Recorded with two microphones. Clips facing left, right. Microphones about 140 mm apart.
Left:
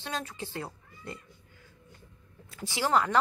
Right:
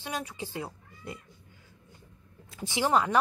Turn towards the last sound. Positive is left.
turn(degrees=-15)  # may be behind; listen again after turning